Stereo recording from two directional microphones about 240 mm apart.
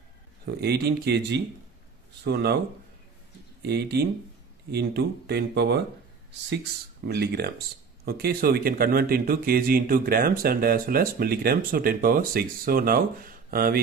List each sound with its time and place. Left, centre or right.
0.5 s speech: right
3.6 s speech: right